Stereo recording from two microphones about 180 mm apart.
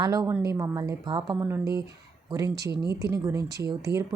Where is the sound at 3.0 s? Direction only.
15° right (ahead or behind).